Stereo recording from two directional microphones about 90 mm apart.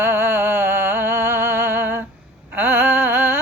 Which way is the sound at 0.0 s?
30° right (ahead or behind).